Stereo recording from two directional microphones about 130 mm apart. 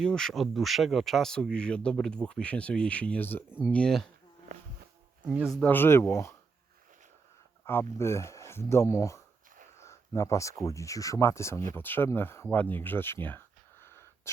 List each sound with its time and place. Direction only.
0.0 s speech: 5° left (ahead or behind)
4.5 s a sound: 65° right (ahead or behind)
5.2 s speech: 10° right (ahead or behind)
5.6 s speech: 15° left (ahead or behind)
7.9 s speech: 20° left (ahead or behind)